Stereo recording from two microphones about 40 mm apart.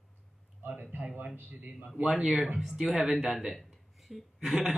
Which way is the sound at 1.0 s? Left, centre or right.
Right.